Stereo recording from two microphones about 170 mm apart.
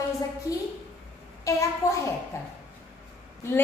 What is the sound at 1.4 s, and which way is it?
Speech, 20° left (ahead or behind).